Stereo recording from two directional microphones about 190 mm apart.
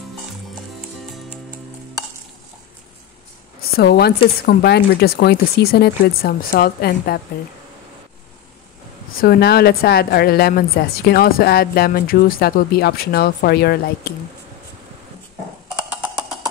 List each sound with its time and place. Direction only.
3.7 s speech: 55° left (ahead or behind)
9.2 s a woman's voice: 55° left (ahead or behind)